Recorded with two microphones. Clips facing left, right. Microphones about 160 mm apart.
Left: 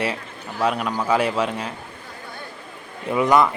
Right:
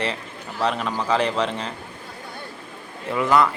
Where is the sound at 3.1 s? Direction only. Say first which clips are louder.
Left 2 dB; 20° left (ahead or behind).